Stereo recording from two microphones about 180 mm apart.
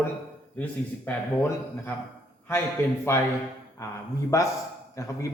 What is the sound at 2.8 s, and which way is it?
Speech, 10° left (ahead or behind).